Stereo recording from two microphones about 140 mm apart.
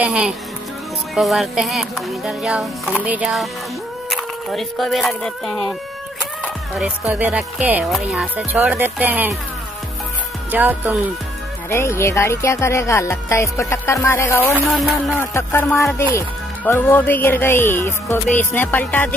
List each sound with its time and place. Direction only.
0.0 s speech: 5° right (ahead or behind)
1.1 s music: centre (ahead or behind)
4.1 s speech: centre (ahead or behind)
6.8 s speech: 10° right (ahead or behind)
7.9 s music: 5° right (ahead or behind)
8.5 s speech: 15° right (ahead or behind)
10.5 s speech: 15° right (ahead or behind)
11.7 s music: 20° left (ahead or behind)
15.1 s speech: 15° left (ahead or behind)